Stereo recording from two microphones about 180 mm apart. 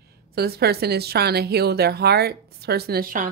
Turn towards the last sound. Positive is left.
turn(degrees=-55)  # may be behind; listen again after turning